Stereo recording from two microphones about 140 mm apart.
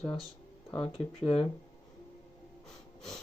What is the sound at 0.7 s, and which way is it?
Speech, 40° left (ahead or behind).